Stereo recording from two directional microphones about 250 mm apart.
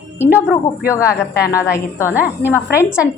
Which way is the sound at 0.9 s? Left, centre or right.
Centre.